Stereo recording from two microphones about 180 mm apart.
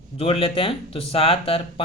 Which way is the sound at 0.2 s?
30° left (ahead or behind).